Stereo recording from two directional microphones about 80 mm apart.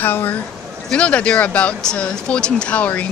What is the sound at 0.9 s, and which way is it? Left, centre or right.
Speech, centre.